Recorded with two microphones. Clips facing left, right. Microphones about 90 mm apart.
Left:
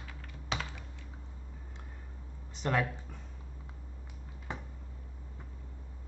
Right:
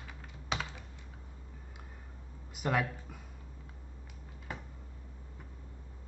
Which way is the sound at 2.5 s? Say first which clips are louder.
Left 1 dB; 10° right (ahead or behind).